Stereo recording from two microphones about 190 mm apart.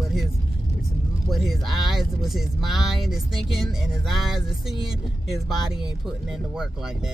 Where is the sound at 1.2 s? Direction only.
Centre (ahead or behind).